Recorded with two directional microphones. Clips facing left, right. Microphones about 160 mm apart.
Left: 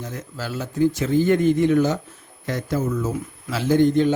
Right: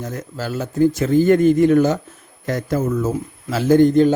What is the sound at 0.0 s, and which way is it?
A man's voice, 45° right (ahead or behind).